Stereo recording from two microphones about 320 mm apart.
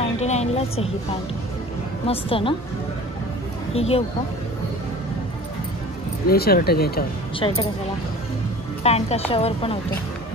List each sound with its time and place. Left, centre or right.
0.2 s speech: left
2.0 s speech: centre
3.7 s speech: centre
6.2 s speech: left
7.3 s speech: centre
8.8 s speech: centre